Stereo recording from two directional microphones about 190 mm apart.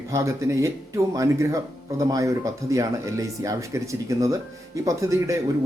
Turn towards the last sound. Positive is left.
turn(degrees=-15)  # may be behind; listen again after turning